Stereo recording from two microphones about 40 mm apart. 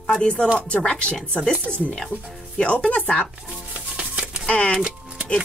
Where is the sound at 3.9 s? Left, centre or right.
Right.